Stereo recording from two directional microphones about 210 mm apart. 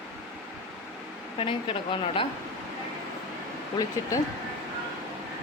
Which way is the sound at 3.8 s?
15° left (ahead or behind).